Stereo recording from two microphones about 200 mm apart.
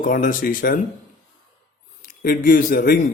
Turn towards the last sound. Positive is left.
turn(degrees=45)  # may be behind; listen again after turning